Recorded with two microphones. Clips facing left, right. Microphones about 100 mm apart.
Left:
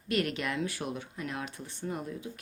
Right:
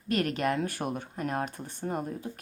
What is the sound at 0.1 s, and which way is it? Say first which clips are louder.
Speech: right 3 dB; 40° right (ahead or behind).